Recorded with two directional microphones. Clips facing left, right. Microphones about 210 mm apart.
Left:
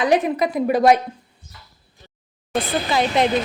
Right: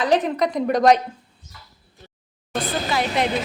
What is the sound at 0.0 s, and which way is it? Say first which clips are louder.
Speech: left 1 dB; 10° left (ahead or behind).